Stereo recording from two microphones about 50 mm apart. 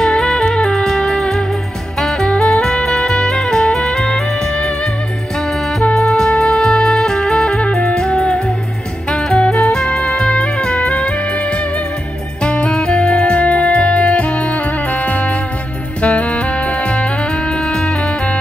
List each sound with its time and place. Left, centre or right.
0.0 s music: centre
5.9 s music: centre